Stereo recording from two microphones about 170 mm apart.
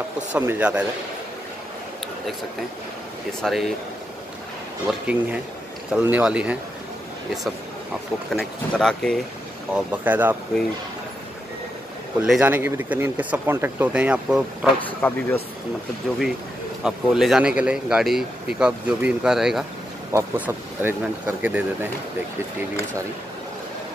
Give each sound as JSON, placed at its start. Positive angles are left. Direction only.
{"t": 0.3, "sound": "speech", "side_deg": -10}
{"t": 3.4, "sound": "speech", "side_deg": 0}
{"t": 4.8, "sound": "speech", "side_deg": -10}
{"t": 8.3, "sound": "speech", "side_deg": 0}
{"t": 9.8, "sound": "speech", "side_deg": -10}
{"t": 12.2, "sound": "speech", "side_deg": -10}
{"t": 15.0, "sound": "speech", "side_deg": 10}
{"t": 16.8, "sound": "speech", "side_deg": -5}